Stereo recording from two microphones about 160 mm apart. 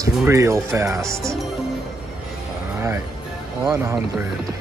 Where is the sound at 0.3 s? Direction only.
20° right (ahead or behind).